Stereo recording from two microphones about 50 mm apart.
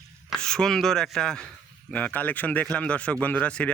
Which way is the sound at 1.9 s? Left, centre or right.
Left.